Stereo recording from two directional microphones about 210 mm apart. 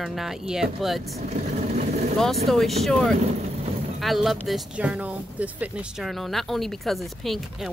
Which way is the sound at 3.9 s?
Centre (ahead or behind).